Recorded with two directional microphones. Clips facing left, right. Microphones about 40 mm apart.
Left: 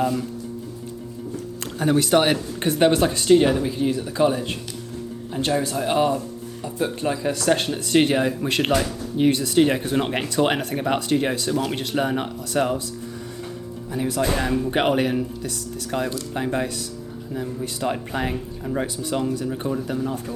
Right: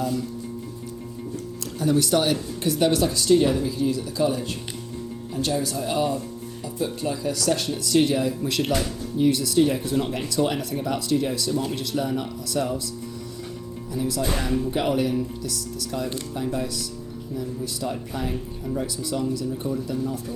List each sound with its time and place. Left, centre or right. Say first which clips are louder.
1.8 s speech: left 3 dB; left
5.7 s speech: left 4 dB; left
9.6 s speech: left 3 dB; left
10.4 s speech: left 3 dB; left
11.5 s speech: left 2 dB; left
11.9 s speech: left 4 dB; left
13.9 s speech: left 1 dB; left
14.2 s speech: left 4 dB; left
15.4 s speech: left 1 dB; left
16.3 s speech: left 3 dB; left
17.3 s speech: left 2 dB; left
17.8 s speech: left 5 dB; left
18.9 s speech: left 2 dB; left
19.5 s speech: left 2 dB; left